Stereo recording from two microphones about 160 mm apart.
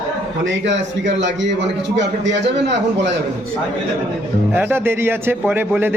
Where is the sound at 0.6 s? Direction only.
90° right.